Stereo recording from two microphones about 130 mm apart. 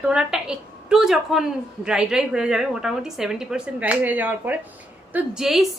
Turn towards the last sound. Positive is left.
turn(degrees=0)  # may be behind; listen again after turning